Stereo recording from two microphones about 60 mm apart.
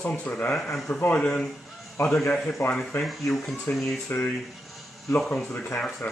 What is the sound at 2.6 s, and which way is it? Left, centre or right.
Speech, left.